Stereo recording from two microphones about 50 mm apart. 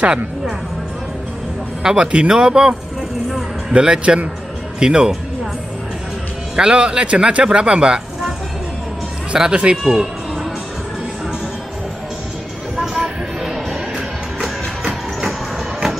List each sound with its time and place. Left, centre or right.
1.8 s speech: centre
3.7 s speech: centre
6.5 s speech: centre
9.3 s speech: centre
9.8 s music: centre
13.4 s music: centre